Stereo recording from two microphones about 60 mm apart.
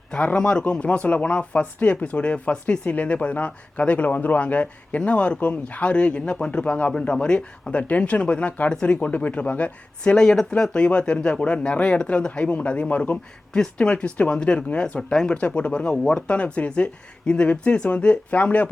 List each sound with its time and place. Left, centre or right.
0.1 s speech: centre
15.1 s speech: centre
15.4 s speech: centre